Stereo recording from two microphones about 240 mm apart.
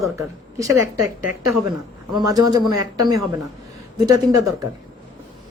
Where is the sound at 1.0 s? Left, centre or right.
Right.